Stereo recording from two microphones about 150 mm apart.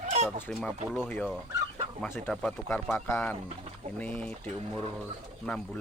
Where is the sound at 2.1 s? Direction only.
10° left (ahead or behind).